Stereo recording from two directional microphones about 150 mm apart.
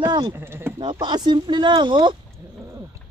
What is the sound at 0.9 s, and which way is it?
Speech, 30° right (ahead or behind).